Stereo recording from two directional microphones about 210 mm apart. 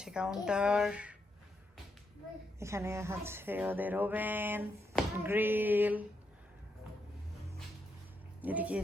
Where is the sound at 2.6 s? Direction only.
15° right (ahead or behind).